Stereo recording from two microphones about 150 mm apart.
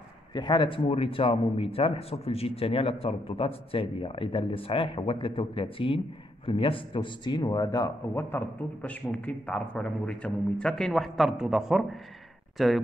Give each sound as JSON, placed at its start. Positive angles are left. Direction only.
{"t": 0.3, "sound": "a man's voice", "side_deg": 30}